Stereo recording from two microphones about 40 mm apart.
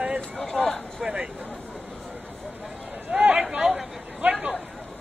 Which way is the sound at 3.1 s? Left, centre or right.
Right.